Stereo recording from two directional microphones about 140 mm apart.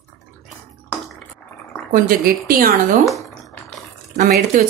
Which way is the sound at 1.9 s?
90° right.